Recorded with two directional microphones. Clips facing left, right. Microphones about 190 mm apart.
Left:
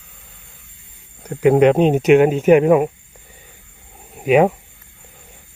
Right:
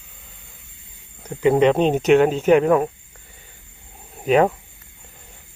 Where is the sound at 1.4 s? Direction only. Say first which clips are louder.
Left 3 dB; 10° left (ahead or behind).